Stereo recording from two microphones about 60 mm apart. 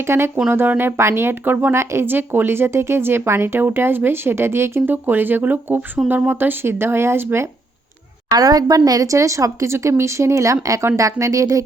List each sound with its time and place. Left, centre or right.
0.0 s a woman's voice: right
1.7 s a woman's voice: right
2.0 s speech: right
8.3 s a woman's voice: right
9.1 s speech: right